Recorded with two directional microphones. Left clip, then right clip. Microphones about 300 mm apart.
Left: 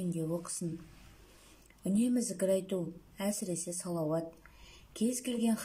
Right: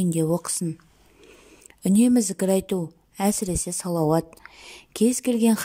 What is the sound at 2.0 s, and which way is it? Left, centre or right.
A woman's voice, right.